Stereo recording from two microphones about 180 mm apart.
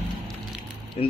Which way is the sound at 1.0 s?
35° left (ahead or behind).